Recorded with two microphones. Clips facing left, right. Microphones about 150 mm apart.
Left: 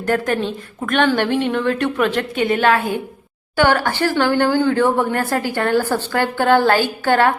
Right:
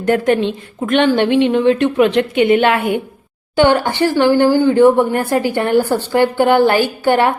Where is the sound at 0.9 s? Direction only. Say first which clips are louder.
Right 4 dB; 20° right (ahead or behind).